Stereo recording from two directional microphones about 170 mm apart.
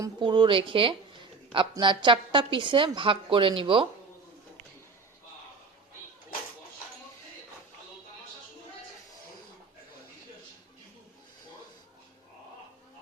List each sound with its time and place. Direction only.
0.2 s a woman's voice: 30° right (ahead or behind)